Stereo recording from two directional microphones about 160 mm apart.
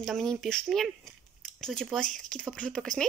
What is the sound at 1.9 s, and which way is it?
Speech, 5° left (ahead or behind).